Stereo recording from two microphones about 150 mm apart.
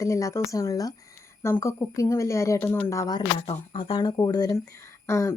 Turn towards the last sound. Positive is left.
turn(degrees=20)  # may be behind; listen again after turning